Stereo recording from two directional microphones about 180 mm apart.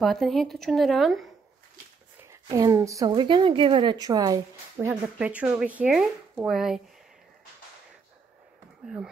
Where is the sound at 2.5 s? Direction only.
20° right (ahead or behind).